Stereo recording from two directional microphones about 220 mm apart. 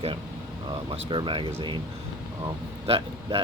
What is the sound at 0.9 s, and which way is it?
Speech, 20° right (ahead or behind).